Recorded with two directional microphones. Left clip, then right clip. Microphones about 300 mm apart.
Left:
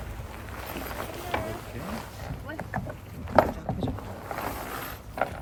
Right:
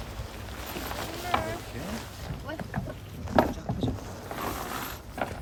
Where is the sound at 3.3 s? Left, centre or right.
Centre.